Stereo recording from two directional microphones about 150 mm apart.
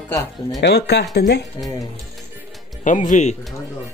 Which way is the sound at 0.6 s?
90° left.